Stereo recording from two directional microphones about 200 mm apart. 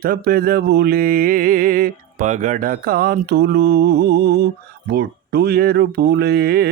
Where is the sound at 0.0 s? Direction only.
50° right (ahead or behind).